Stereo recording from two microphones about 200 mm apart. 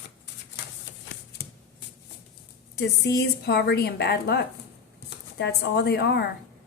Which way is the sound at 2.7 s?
55° left (ahead or behind).